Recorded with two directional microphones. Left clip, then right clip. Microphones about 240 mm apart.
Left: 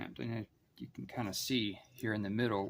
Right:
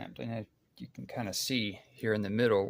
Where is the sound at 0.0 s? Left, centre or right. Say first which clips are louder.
Right 3 dB; centre.